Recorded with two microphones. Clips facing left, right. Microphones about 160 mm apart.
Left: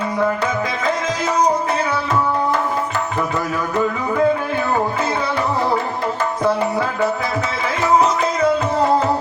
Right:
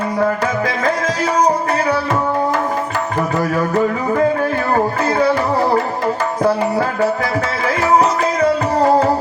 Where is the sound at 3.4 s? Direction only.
40° right (ahead or behind).